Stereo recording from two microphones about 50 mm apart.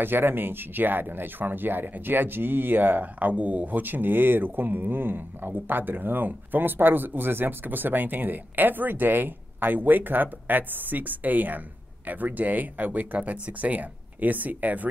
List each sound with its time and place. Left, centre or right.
0.0 s speech: right